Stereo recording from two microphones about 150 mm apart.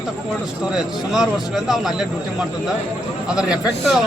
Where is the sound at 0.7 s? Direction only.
Centre (ahead or behind).